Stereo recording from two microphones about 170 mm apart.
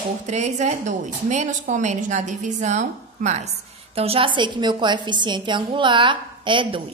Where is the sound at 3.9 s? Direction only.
35° right (ahead or behind).